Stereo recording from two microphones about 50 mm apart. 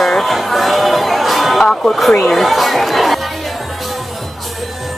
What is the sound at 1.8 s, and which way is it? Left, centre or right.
Speech, centre.